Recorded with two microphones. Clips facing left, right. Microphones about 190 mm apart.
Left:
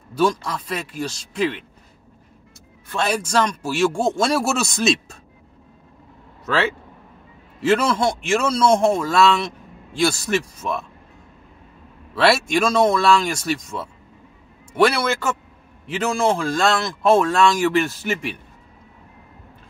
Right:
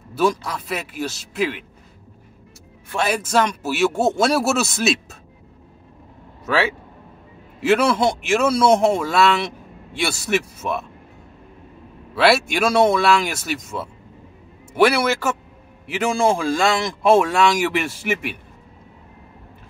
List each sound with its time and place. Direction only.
0.1 s speech: 5° right (ahead or behind)
2.9 s speech: 5° right (ahead or behind)
7.6 s speech: 10° right (ahead or behind)
12.2 s speech: 5° right (ahead or behind)